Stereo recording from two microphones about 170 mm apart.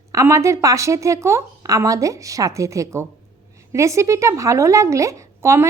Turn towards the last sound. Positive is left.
turn(degrees=-15)  # may be behind; listen again after turning